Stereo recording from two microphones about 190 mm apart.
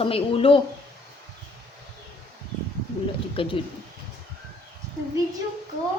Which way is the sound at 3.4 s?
30° left (ahead or behind).